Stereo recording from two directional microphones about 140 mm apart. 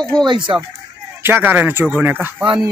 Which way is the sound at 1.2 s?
15° right (ahead or behind).